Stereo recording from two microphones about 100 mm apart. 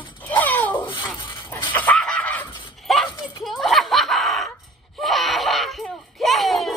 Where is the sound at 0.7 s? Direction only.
50° left (ahead or behind).